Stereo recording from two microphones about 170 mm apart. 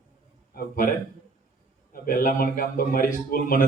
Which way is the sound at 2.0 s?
55° left (ahead or behind).